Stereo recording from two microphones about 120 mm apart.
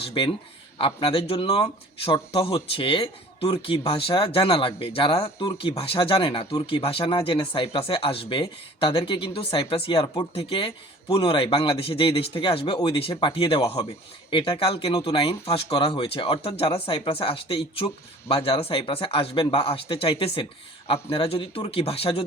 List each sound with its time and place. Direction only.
0.1 s speech: 50° left (ahead or behind)